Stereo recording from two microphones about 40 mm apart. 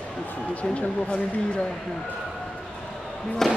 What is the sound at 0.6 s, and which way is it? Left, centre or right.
Speech, left.